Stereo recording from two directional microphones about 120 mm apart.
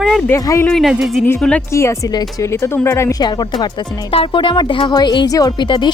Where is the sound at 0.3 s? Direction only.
25° left (ahead or behind).